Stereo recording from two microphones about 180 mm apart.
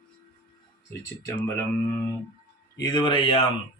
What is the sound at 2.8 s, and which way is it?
Speech, 25° left (ahead or behind).